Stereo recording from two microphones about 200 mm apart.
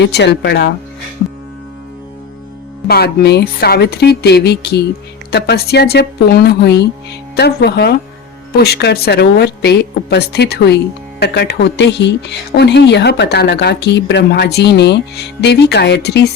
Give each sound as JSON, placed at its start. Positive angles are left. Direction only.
{"t": 0.0, "sound": "speech", "side_deg": 60}
{"t": 2.8, "sound": "speech", "side_deg": 55}